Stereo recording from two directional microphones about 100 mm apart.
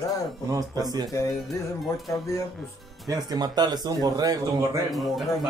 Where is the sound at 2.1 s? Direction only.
30° left (ahead or behind).